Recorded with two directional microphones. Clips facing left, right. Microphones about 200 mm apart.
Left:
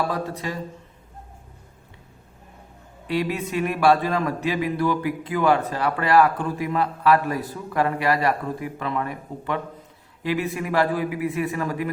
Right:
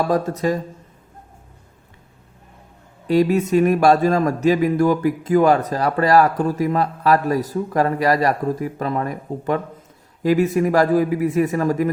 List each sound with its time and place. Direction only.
0.1 s a man's voice: 45° right (ahead or behind)
3.1 s a man's voice: 40° right (ahead or behind)